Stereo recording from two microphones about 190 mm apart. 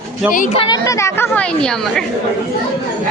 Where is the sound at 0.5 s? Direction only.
20° left (ahead or behind); by 2.0 s 5° left (ahead or behind).